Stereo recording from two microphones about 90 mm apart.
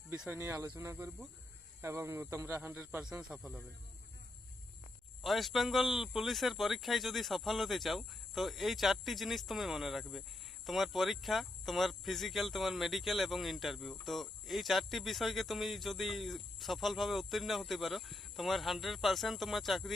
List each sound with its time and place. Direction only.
0.1 s speech: 25° right (ahead or behind)
3.0 s speech: 10° right (ahead or behind)
5.2 s speech: centre (ahead or behind)